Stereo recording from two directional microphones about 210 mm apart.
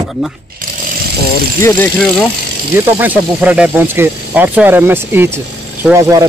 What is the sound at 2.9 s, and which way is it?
Speech, 5° right (ahead or behind).